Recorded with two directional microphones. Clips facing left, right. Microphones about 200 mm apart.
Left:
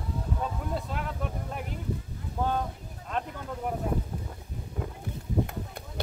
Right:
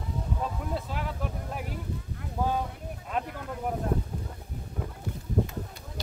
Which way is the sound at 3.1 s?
5° right (ahead or behind).